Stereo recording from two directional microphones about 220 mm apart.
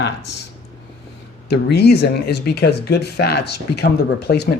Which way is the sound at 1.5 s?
50° left (ahead or behind).